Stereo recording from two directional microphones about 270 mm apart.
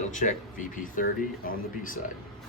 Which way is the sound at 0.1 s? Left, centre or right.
Left.